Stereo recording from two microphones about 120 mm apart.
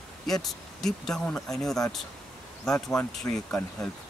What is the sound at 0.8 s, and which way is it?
Speech, 5° left (ahead or behind).